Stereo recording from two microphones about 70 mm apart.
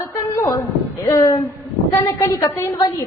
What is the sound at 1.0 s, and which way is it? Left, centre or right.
Speech, left.